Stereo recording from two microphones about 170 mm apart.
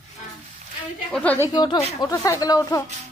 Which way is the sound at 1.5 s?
25° left (ahead or behind).